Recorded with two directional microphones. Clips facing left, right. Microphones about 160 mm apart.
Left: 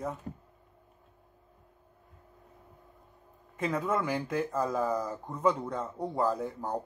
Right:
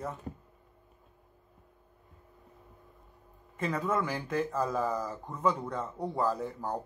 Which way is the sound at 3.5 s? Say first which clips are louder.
Left 1 dB; 5° left (ahead or behind).